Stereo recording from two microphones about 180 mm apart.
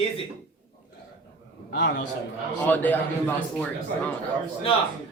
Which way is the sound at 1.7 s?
75° left (ahead or behind).